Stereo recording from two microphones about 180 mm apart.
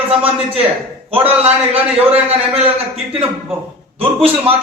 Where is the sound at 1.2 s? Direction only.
35° right (ahead or behind).